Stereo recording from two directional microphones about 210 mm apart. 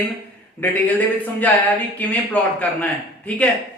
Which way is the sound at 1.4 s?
5° left (ahead or behind).